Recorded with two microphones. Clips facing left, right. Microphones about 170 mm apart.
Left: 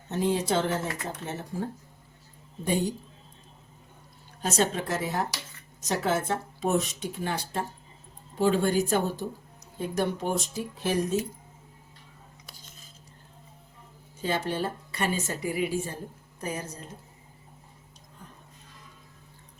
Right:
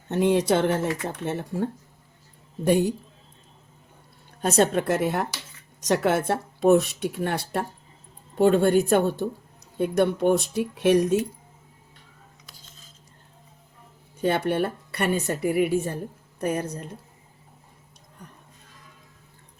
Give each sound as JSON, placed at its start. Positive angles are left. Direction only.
{"t": 0.1, "sound": "a woman's voice", "side_deg": -65}
{"t": 2.6, "sound": "a woman's voice", "side_deg": -65}
{"t": 4.4, "sound": "a woman's voice", "side_deg": -55}
{"t": 14.2, "sound": "a woman's voice", "side_deg": -60}